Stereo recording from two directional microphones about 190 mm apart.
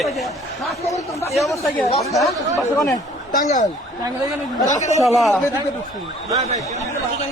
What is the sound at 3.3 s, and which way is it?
Speech, 40° left (ahead or behind).